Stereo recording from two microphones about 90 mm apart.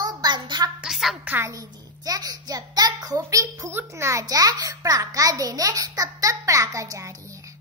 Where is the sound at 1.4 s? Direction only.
40° right (ahead or behind).